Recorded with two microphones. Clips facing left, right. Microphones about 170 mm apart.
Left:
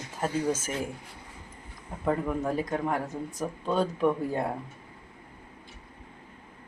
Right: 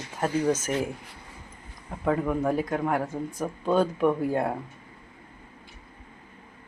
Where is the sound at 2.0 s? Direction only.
Centre (ahead or behind).